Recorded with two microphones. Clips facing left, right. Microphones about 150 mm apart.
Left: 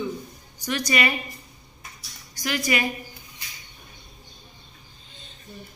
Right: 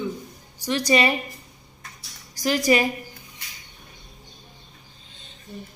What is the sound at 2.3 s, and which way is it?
Speech, 35° right (ahead or behind).